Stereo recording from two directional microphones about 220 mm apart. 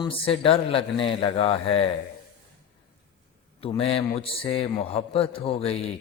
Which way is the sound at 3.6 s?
25° left (ahead or behind).